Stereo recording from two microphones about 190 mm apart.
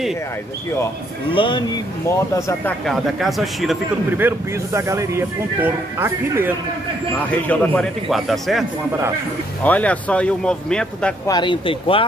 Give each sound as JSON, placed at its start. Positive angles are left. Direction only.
{"t": 1.3, "sound": "speech", "side_deg": 25}
{"t": 2.8, "sound": "speech", "side_deg": 0}
{"t": 4.2, "sound": "speech", "side_deg": -15}
{"t": 7.4, "sound": "speech", "side_deg": 5}
{"t": 11.2, "sound": "speech", "side_deg": 25}